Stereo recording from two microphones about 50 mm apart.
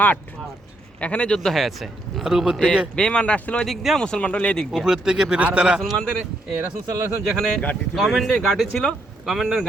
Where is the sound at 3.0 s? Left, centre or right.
Centre.